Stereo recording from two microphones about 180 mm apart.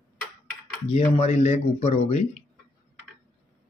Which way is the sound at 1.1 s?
40° left (ahead or behind).